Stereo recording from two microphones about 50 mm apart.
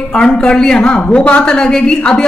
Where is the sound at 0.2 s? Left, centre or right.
Centre.